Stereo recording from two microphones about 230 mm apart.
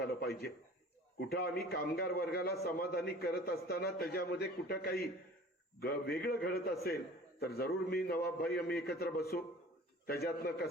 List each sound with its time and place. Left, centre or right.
0.3 s a man's voice: left